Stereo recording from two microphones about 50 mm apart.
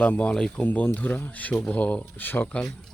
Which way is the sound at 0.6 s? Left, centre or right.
Left.